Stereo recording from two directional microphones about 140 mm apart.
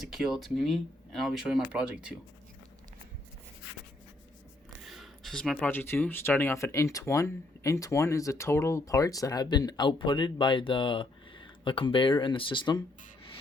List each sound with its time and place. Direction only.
0.0 s speech: centre (ahead or behind)
4.8 s a sound: centre (ahead or behind)
5.6 s speech: 15° left (ahead or behind); by 12.8 s 35° left (ahead or behind)